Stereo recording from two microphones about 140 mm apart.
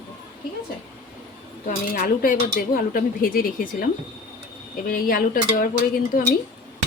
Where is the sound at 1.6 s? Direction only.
85° left.